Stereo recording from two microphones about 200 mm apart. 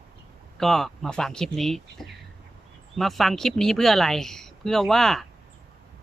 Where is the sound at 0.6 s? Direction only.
Centre (ahead or behind).